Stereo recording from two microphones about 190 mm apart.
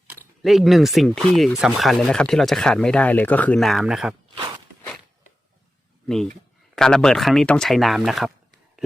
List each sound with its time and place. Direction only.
0.1 s speech: centre (ahead or behind)
4.4 s walk: 25° right (ahead or behind)
6.7 s speech: 5° left (ahead or behind)